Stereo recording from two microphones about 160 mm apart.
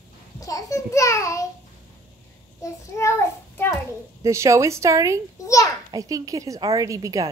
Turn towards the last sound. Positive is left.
turn(degrees=-20)  # may be behind; listen again after turning